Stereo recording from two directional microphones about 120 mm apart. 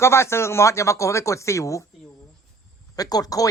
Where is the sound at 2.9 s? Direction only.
30° left (ahead or behind).